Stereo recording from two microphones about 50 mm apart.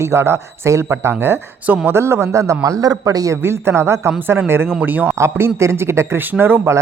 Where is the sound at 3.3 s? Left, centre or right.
Right.